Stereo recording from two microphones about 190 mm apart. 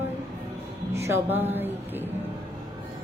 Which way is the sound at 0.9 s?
15° right (ahead or behind).